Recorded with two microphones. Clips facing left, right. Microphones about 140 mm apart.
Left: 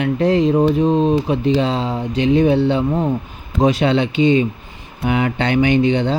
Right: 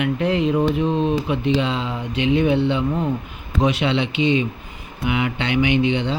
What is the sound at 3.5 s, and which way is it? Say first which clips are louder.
Speech: left 4 dB; 40° left (ahead or behind).